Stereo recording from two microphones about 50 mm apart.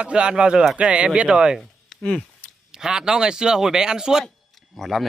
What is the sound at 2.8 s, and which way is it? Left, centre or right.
Speech, centre.